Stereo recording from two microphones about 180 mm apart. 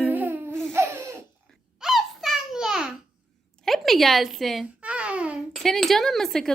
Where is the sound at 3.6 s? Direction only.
Centre (ahead or behind).